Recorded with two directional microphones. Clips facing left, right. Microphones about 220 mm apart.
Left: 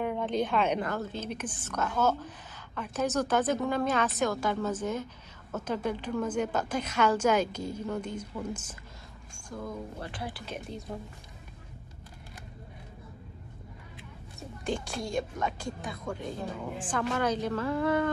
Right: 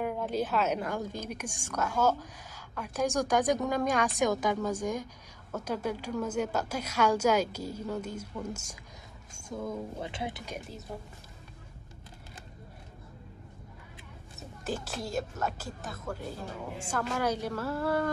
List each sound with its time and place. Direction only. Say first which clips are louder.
0.0 s a woman's voice: left 2 dB; 5° right (ahead or behind)
9.7 s speech: right 2 dB; 20° right (ahead or behind)
10.4 s a woman's voice: left 2 dB; 10° right (ahead or behind)
14.6 s a woman's voice: left 2 dB; 5° right (ahead or behind)